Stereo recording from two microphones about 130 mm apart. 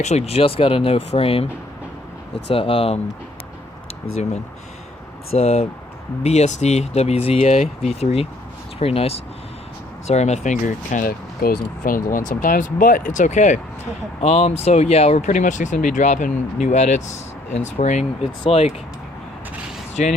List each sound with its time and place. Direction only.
0.0 s speech: 55° left (ahead or behind)
2.5 s speech: 45° left (ahead or behind)
5.3 s speech: 55° left (ahead or behind); by 11.0 s 70° left (ahead or behind)
11.4 s speech: 90° left; by 13.6 s 70° left (ahead or behind)
14.2 s speech: 55° left (ahead or behind)
18.4 s speech: 50° left (ahead or behind)
20.0 s speech: 70° left (ahead or behind)